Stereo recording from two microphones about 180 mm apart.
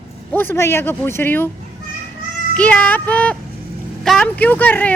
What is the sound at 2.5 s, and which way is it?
Speech, 5° left (ahead or behind).